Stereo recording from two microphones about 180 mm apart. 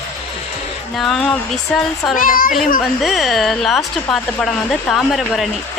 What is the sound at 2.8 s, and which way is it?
A woman's voice, centre (ahead or behind).